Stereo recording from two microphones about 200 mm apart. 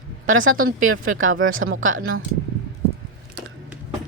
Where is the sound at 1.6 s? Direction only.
55° right (ahead or behind).